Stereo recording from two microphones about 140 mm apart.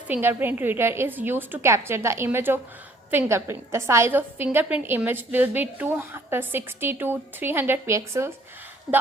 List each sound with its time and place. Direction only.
0.1 s a woman's voice: 15° right (ahead or behind)